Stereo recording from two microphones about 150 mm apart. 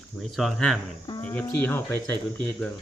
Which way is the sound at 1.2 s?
10° left (ahead or behind).